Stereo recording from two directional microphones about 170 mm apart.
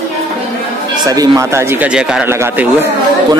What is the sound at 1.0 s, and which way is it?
Speech, 20° right (ahead or behind).